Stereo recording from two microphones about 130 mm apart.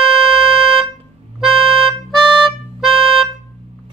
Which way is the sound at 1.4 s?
Centre (ahead or behind).